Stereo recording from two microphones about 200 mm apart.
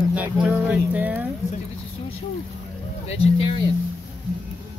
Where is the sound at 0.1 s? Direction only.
5° right (ahead or behind).